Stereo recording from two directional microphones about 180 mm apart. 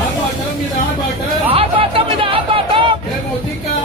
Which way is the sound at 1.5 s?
30° right (ahead or behind).